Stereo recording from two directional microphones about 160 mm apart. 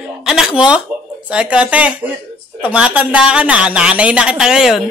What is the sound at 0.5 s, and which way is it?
Speech, 30° left (ahead or behind).